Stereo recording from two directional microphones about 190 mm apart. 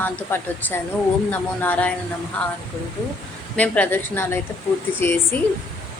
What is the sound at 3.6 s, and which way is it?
A man's voice, 10° left (ahead or behind).